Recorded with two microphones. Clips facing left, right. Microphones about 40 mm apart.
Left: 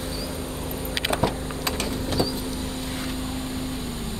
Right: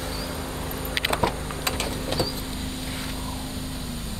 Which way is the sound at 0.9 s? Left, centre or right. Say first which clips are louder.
Even; right.